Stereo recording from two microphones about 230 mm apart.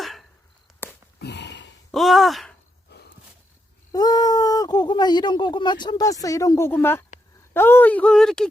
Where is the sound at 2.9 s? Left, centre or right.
Left.